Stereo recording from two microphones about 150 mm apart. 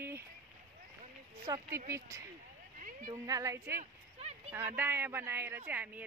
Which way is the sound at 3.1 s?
20° right (ahead or behind).